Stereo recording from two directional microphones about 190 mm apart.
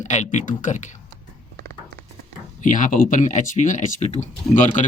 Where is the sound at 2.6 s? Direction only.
40° left (ahead or behind).